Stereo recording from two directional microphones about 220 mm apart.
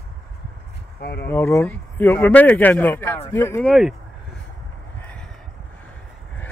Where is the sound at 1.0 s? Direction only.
45° left (ahead or behind).